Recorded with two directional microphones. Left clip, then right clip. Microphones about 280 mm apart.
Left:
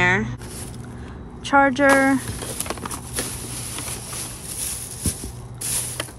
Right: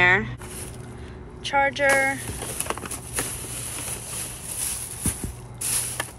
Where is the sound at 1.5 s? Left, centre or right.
Centre.